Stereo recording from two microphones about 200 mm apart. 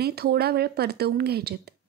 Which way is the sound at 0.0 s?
50° right (ahead or behind).